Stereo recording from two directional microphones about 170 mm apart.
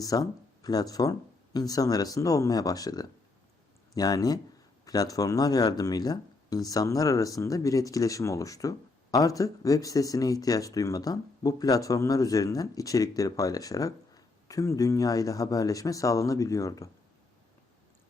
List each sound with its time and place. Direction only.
0.0 s speech: 20° left (ahead or behind)